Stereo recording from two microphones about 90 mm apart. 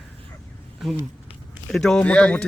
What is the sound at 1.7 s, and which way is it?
Speech, 5° left (ahead or behind).